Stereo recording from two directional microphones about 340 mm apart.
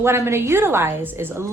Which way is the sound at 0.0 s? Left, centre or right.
Centre.